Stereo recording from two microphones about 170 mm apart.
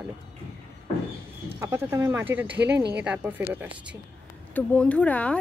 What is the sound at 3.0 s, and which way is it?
Speech, 10° right (ahead or behind).